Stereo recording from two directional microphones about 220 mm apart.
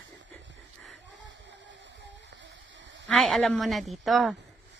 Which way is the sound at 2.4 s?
55° right (ahead or behind).